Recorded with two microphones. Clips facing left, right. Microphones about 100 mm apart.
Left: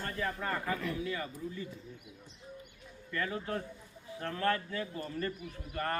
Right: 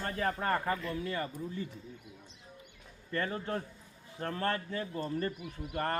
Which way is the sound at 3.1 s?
35° right (ahead or behind).